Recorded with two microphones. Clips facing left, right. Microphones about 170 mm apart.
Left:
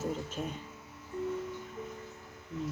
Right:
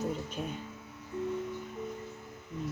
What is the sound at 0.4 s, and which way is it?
Speech, centre (ahead or behind).